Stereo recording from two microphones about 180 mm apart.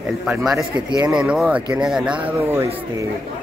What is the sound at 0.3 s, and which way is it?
Speech, 5° right (ahead or behind).